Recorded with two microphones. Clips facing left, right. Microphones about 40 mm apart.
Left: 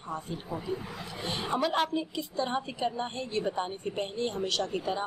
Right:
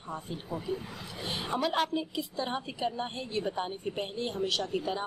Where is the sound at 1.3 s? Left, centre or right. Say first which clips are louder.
Left 2 dB; centre.